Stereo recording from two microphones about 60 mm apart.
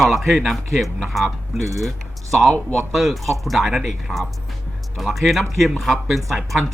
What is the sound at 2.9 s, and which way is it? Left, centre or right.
Speech, centre.